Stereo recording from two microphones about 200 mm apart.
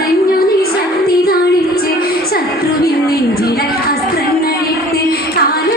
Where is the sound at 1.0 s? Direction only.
50° left (ahead or behind).